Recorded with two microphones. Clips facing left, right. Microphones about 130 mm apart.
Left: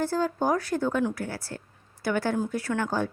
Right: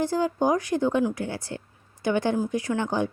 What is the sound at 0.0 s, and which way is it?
A woman's voice, 15° right (ahead or behind).